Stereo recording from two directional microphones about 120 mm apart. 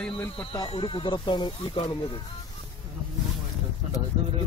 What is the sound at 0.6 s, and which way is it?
Speech, 45° left (ahead or behind).